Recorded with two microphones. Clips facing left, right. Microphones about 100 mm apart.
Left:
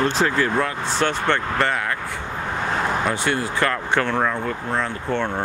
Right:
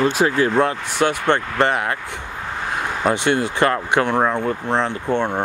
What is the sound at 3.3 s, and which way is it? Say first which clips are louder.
Speech: right 4 dB; 20° right (ahead or behind).